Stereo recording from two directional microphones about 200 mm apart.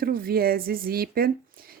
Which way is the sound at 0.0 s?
50° right (ahead or behind).